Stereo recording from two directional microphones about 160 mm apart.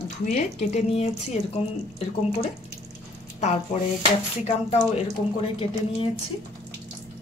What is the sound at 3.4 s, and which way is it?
Speech, 45° left (ahead or behind).